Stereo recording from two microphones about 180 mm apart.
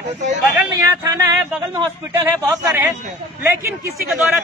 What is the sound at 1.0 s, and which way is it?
Speech, 20° right (ahead or behind).